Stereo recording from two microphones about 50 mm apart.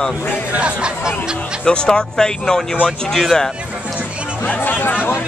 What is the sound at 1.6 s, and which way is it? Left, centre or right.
Speech, centre.